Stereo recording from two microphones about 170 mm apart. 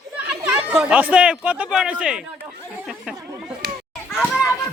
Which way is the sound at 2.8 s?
Centre (ahead or behind).